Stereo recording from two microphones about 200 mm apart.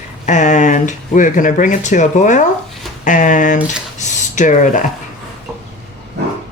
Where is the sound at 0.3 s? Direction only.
35° left (ahead or behind).